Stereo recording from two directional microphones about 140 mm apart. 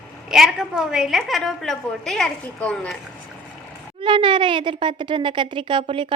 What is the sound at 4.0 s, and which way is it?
A woman's voice, 35° right (ahead or behind).